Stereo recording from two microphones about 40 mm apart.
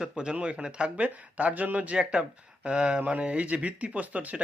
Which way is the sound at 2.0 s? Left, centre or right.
Right.